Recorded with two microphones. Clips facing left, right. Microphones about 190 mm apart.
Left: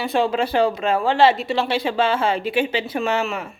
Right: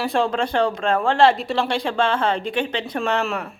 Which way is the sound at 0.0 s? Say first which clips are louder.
Left 1 dB; centre (ahead or behind).